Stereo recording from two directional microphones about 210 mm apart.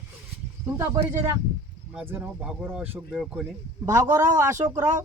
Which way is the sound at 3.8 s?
15° right (ahead or behind).